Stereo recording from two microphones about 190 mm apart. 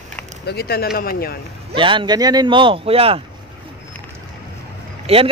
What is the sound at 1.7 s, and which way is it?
Speech, 25° right (ahead or behind).